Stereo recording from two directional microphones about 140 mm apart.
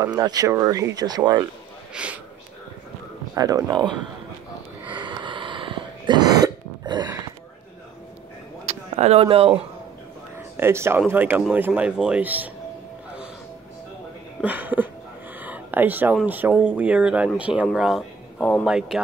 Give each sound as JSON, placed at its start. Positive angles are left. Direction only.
{"t": 0.0, "sound": "speech", "side_deg": -30}
{"t": 2.0, "sound": "speech", "side_deg": -5}
{"t": 3.3, "sound": "speech", "side_deg": -25}
{"t": 4.8, "sound": "cough", "side_deg": -35}
{"t": 8.6, "sound": "a sound", "side_deg": -50}
{"t": 10.6, "sound": "speech", "side_deg": -20}
{"t": 14.4, "sound": "speech", "side_deg": -10}
{"t": 15.4, "sound": "a sound", "side_deg": -10}
{"t": 16.3, "sound": "a man's voice", "side_deg": -10}
{"t": 18.7, "sound": "speech", "side_deg": -5}